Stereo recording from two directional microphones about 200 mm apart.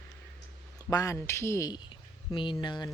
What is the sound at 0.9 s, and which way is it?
Speech, 15° left (ahead or behind).